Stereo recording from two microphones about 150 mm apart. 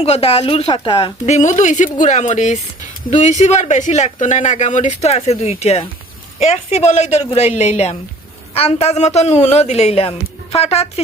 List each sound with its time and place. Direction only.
0.0 s speech: 40° left (ahead or behind)
1.2 s speech: 55° left (ahead or behind)